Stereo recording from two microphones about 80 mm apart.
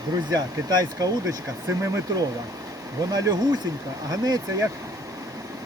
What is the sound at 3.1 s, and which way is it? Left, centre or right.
Speech, right.